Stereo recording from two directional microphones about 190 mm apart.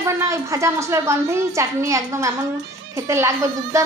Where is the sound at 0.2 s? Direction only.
15° right (ahead or behind).